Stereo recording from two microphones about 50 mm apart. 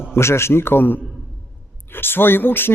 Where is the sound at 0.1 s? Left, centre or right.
Left.